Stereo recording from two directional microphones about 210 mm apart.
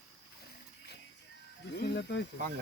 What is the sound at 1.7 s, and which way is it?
Speech, 55° left (ahead or behind).